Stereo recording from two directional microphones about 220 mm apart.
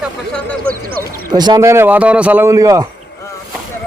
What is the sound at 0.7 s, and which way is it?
Speech, 20° right (ahead or behind).